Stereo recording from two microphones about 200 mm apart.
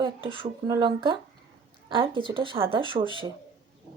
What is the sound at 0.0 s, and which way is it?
Speech, 25° right (ahead or behind).